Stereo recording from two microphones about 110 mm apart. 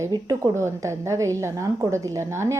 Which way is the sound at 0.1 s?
40° right (ahead or behind).